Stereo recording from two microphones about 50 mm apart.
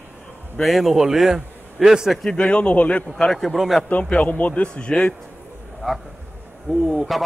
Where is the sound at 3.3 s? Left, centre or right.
Centre.